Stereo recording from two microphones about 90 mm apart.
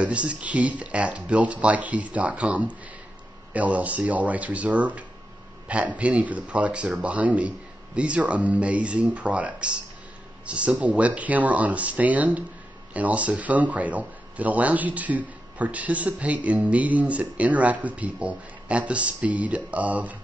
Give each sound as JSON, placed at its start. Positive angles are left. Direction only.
{"t": 0.0, "sound": "speech", "side_deg": -15}